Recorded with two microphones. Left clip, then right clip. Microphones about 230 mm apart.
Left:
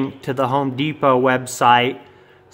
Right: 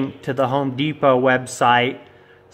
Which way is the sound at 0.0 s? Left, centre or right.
Centre.